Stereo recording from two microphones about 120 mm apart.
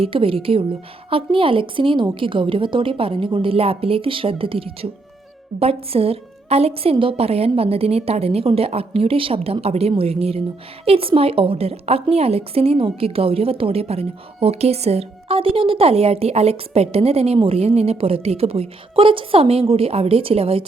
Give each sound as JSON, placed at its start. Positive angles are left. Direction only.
{"t": 0.0, "sound": "a woman's voice", "side_deg": -50}